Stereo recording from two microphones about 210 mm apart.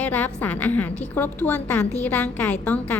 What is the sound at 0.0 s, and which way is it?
A woman's voice, 10° left (ahead or behind).